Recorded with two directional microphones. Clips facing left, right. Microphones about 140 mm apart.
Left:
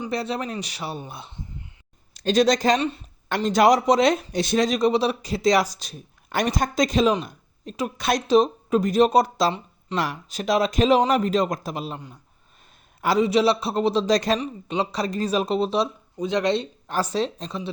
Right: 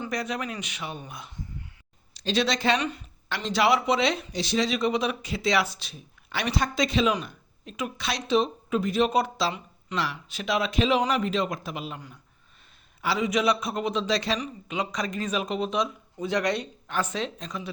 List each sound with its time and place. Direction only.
0.1 s a man's voice: 30° left (ahead or behind)
2.1 s speech: 45° left (ahead or behind)
13.0 s a man's voice: 45° left (ahead or behind)
13.2 s speech: 30° left (ahead or behind)
14.3 s speech: 30° left (ahead or behind)
16.1 s speech: 20° left (ahead or behind)
16.9 s speech: 35° left (ahead or behind)